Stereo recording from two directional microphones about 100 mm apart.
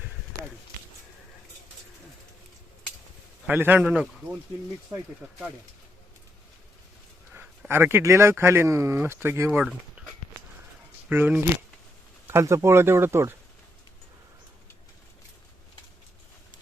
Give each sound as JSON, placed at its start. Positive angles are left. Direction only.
{"t": 3.5, "sound": "speech", "side_deg": -20}
{"t": 3.9, "sound": "speech", "side_deg": -10}
{"t": 7.7, "sound": "speech", "side_deg": -20}
{"t": 9.5, "sound": "speech", "side_deg": -10}
{"t": 11.1, "sound": "speech", "side_deg": -20}